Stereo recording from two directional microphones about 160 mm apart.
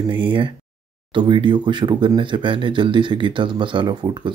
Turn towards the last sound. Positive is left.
turn(degrees=-30)  # may be behind; listen again after turning